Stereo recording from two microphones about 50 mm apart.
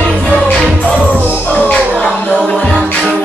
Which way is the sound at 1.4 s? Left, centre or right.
Left.